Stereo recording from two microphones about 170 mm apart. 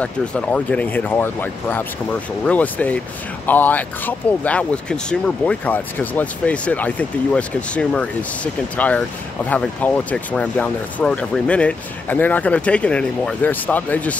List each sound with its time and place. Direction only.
0.0 s speech: 5° left (ahead or behind)